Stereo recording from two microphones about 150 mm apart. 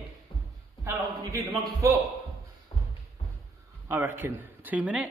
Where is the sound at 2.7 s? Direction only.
35° left (ahead or behind).